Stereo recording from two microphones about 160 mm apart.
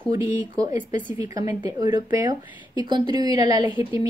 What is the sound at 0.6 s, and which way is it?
Speech, 25° right (ahead or behind).